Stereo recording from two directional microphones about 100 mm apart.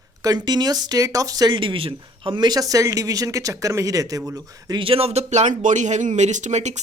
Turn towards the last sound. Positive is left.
turn(degrees=-90)